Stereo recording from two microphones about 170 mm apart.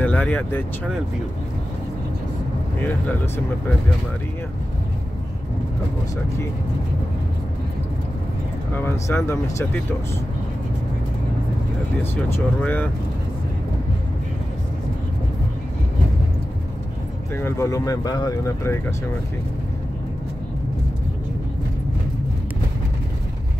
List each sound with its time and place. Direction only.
0.0 s speech: 10° left (ahead or behind)
8.7 s speech: 15° left (ahead or behind)
12.0 s speech: 10° left (ahead or behind)
17.4 s speech: 15° left (ahead or behind)